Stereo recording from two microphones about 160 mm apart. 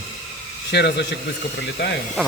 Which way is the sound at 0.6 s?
90° left.